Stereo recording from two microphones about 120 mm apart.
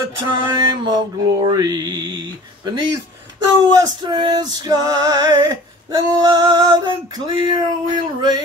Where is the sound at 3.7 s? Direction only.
35° right (ahead or behind).